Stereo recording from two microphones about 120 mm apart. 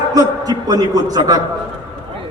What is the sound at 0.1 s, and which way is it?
A man's voice, 30° right (ahead or behind).